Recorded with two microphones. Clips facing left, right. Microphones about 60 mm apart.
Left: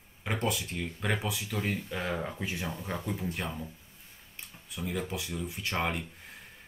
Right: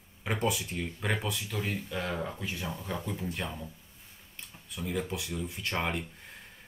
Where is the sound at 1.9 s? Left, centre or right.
Centre.